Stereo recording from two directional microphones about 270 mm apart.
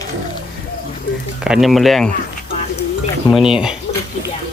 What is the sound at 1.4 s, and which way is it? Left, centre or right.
Speech, centre.